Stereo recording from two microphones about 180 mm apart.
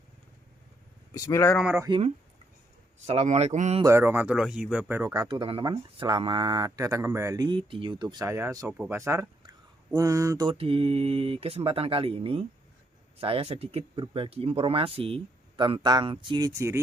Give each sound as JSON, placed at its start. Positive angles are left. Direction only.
{"t": 1.1, "sound": "speech", "side_deg": 15}
{"t": 1.5, "sound": "speech", "side_deg": -5}
{"t": 3.0, "sound": "speech", "side_deg": -40}
{"t": 3.8, "sound": "speech", "side_deg": -15}